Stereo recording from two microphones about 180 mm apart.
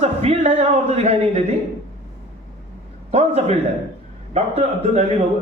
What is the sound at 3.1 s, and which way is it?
A man's voice, 35° right (ahead or behind).